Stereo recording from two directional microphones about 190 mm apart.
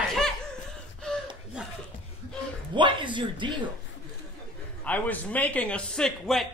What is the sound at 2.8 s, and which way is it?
Speech, 25° right (ahead or behind).